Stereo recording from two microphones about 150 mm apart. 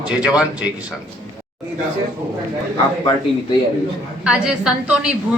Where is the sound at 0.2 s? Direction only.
5° right (ahead or behind).